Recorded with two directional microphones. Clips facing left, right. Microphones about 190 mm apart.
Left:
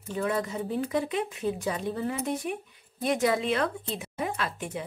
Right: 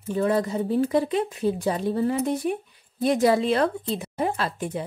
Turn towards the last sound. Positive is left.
turn(degrees=-35)  # may be behind; listen again after turning